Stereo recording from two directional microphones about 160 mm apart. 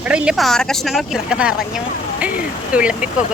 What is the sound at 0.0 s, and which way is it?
Speech, 5° right (ahead or behind).